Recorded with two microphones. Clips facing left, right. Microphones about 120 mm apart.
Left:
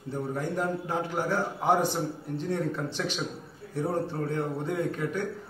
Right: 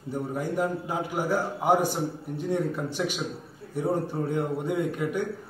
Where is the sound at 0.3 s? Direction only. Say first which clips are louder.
Right 2 dB; 10° right (ahead or behind).